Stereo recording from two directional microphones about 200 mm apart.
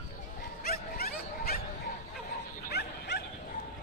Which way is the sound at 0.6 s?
50° left (ahead or behind).